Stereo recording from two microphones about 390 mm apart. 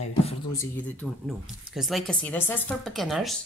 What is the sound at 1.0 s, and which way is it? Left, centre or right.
Speech, centre.